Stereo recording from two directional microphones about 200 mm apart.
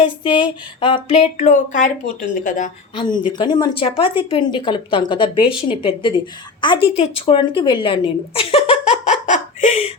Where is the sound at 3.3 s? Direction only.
20° left (ahead or behind).